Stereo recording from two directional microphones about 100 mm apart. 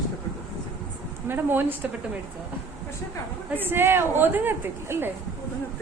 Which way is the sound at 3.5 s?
20° right (ahead or behind).